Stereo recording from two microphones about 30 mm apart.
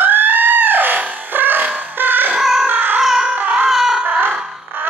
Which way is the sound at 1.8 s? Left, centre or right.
Right.